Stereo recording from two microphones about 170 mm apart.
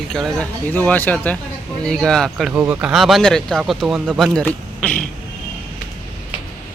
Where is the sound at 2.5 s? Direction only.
10° right (ahead or behind); by 5.0 s 5° left (ahead or behind).